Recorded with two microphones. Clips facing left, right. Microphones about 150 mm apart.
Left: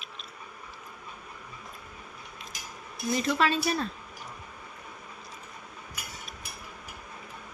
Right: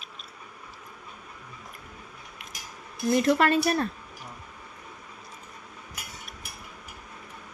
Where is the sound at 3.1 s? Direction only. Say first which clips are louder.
Right 5 dB; 55° right (ahead or behind).